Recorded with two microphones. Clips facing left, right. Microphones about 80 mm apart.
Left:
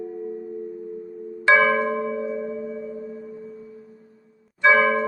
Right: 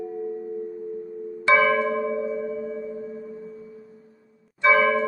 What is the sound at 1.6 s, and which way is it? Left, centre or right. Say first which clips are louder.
Bell: left 1 dB; left.